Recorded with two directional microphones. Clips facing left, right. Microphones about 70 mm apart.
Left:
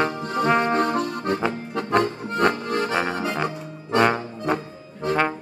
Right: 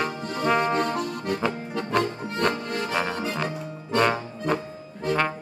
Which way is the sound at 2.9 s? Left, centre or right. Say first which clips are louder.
Left 3 dB; left.